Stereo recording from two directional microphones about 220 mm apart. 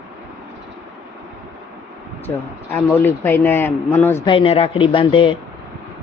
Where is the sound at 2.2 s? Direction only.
10° left (ahead or behind).